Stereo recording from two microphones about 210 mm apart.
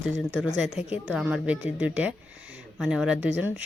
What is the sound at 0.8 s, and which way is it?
Speech, 30° left (ahead or behind).